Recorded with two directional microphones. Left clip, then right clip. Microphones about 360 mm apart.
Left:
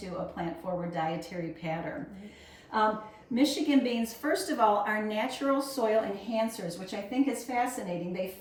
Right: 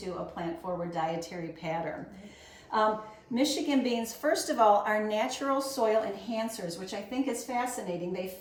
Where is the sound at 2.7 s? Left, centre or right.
Centre.